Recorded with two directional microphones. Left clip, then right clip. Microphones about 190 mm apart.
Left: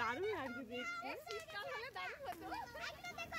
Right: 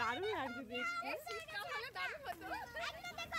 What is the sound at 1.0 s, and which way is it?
Speech, 55° right (ahead or behind).